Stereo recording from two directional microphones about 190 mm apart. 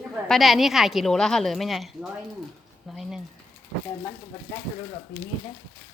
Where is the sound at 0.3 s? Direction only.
Centre (ahead or behind).